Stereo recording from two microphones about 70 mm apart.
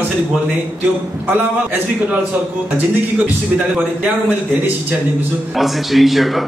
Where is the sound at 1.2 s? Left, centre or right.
Right.